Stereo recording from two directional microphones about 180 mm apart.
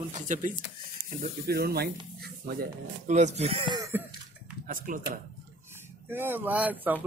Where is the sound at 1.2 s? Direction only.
55° right (ahead or behind); by 3.8 s 30° right (ahead or behind).